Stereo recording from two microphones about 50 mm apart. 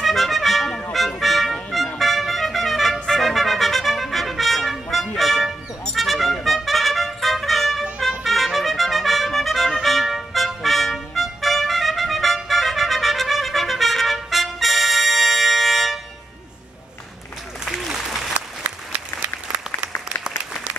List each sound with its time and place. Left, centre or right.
0.0 s music: centre
6.4 s trumpet: centre
8.2 s music: centre
12.4 s trumpet: centre
17.7 s applause: centre
18.6 s applause: right